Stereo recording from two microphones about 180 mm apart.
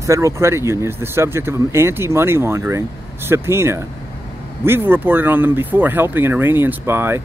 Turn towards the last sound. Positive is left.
turn(degrees=-15)  # may be behind; listen again after turning